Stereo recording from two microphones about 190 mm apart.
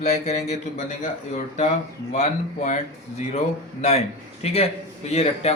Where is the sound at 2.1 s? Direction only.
40° left (ahead or behind).